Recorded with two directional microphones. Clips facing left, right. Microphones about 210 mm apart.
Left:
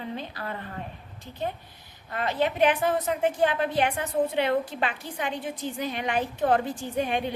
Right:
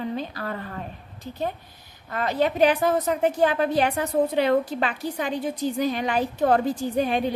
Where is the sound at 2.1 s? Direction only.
40° right (ahead or behind).